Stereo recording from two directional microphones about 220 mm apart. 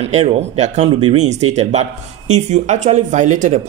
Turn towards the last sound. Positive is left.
turn(degrees=-35)  # may be behind; listen again after turning